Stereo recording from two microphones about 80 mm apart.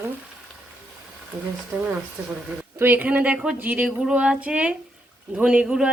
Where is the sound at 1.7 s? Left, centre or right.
Centre.